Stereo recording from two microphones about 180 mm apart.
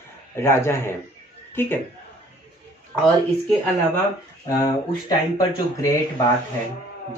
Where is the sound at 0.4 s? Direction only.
15° left (ahead or behind).